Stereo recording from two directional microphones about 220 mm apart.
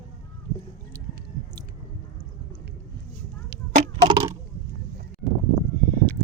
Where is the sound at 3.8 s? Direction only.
20° right (ahead or behind).